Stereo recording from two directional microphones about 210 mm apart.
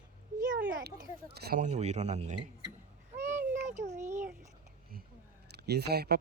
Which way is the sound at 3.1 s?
10° right (ahead or behind).